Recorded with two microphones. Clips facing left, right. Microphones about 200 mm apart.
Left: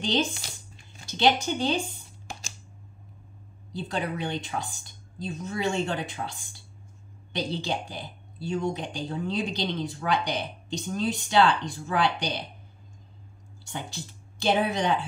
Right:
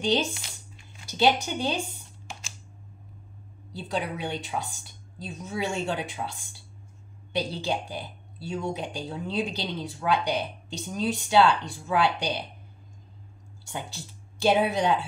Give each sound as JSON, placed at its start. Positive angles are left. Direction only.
{"t": 0.4, "sound": "a sound", "side_deg": 35}
{"t": 1.0, "sound": "speech", "side_deg": -10}
{"t": 3.7, "sound": "speech", "side_deg": -10}
{"t": 7.3, "sound": "speech", "side_deg": -10}
{"t": 13.7, "sound": "speech", "side_deg": -10}